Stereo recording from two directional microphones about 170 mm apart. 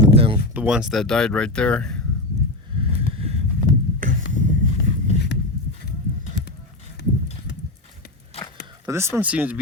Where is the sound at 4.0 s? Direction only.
50° right (ahead or behind).